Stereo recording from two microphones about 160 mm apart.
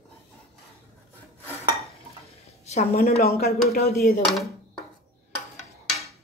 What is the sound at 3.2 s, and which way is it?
Speech, 70° left (ahead or behind).